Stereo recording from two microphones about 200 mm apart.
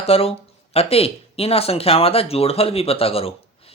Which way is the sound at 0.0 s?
30° left (ahead or behind).